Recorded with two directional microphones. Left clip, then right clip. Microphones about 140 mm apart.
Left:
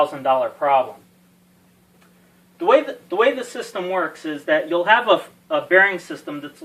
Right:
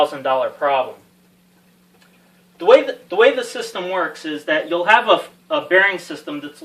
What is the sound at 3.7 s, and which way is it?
Speech, 20° right (ahead or behind).